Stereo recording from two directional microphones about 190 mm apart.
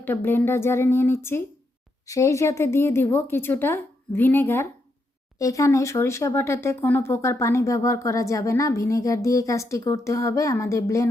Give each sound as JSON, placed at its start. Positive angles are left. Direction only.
{"t": 0.0, "sound": "speech", "side_deg": 10}